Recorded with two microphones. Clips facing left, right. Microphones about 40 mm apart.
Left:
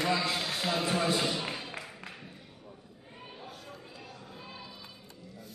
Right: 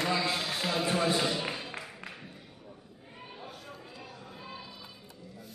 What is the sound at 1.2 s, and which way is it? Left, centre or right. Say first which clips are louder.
Music: right 1 dB; centre.